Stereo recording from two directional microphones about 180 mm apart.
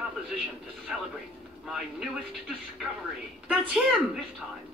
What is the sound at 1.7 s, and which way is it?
Speech, centre (ahead or behind).